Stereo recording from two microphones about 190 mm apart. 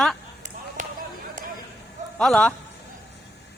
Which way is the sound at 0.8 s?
45° right (ahead or behind).